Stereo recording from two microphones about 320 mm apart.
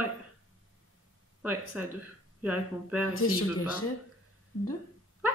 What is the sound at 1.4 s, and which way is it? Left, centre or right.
Speech, centre.